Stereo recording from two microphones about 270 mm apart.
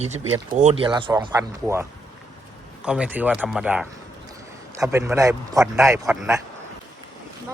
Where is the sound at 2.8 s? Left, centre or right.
Centre.